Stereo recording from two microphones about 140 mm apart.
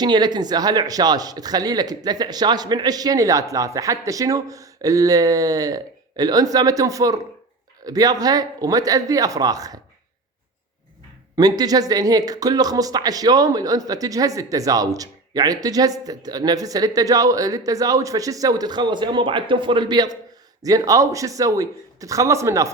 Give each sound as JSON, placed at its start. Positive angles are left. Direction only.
{"t": 0.0, "sound": "speech", "side_deg": -30}
{"t": 11.3, "sound": "speech", "side_deg": -30}